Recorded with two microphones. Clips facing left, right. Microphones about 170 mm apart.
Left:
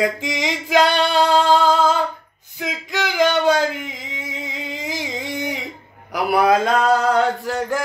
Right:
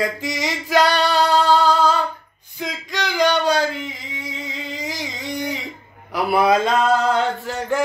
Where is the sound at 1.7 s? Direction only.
10° left (ahead or behind).